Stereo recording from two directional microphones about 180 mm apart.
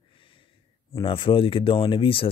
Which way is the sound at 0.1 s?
30° left (ahead or behind).